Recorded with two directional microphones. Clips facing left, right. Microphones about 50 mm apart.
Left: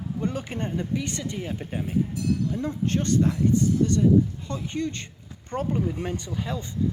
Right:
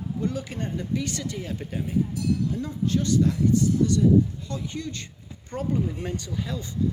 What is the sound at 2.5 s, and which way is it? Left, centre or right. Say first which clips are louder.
Speech: even; left.